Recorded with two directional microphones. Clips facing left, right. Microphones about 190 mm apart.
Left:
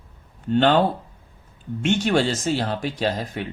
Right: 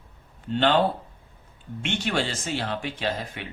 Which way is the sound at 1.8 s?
45° left (ahead or behind).